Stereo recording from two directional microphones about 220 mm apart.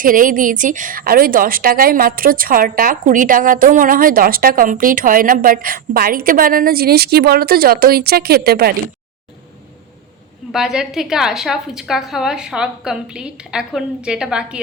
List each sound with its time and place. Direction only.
0.0 s a woman's voice: 40° right (ahead or behind)
10.5 s a woman's voice: 5° right (ahead or behind)